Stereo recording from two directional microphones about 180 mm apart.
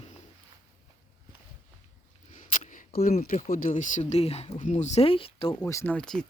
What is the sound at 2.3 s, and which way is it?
Speech, 45° left (ahead or behind).